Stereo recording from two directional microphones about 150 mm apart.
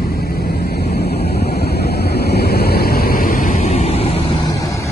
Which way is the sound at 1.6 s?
90° left.